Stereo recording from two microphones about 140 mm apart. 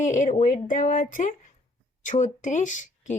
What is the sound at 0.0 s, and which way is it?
Speech, 60° left (ahead or behind).